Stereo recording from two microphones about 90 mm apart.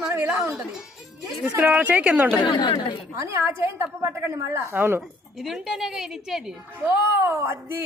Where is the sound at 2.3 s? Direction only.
60° left (ahead or behind).